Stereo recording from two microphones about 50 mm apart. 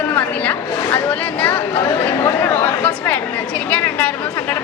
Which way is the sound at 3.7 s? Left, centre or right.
Left.